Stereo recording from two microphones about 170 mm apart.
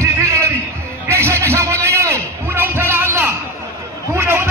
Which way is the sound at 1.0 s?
15° right (ahead or behind).